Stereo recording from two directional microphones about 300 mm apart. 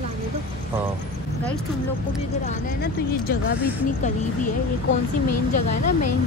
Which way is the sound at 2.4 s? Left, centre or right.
Left.